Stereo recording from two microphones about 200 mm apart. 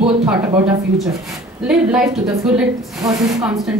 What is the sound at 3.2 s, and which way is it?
Speech, centre (ahead or behind).